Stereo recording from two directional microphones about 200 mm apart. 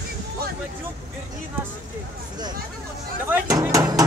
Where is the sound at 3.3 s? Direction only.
15° right (ahead or behind).